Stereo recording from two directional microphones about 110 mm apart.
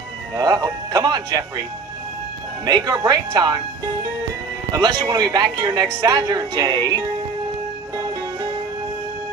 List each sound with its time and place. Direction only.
0.4 s a woman's voice: 35° right (ahead or behind)
2.6 s a woman's voice: 35° right (ahead or behind)
4.7 s a woman's voice: 40° right (ahead or behind)